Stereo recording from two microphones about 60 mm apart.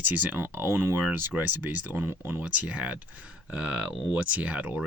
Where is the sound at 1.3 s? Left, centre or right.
Right.